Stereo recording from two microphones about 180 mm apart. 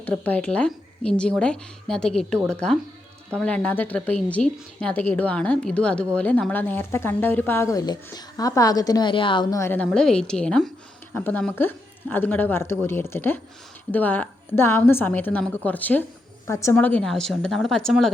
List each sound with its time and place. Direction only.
0.0 s speech: 5° left (ahead or behind)